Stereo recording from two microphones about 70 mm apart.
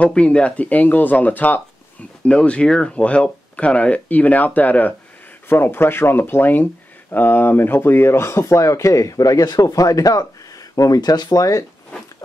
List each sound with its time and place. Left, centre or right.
0.0 s speech: centre; by 11.6 s left